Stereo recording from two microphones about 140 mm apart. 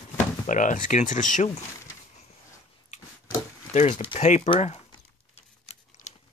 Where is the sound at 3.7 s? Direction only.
55° left (ahead or behind).